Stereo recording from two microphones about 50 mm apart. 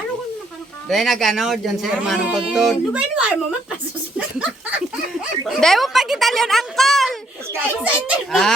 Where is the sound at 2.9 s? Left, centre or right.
Right.